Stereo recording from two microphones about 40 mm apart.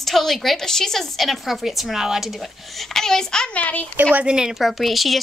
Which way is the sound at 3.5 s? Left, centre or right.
Left.